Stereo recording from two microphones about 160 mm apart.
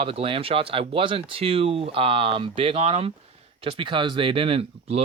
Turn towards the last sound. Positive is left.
turn(degrees=-40)  # may be behind; listen again after turning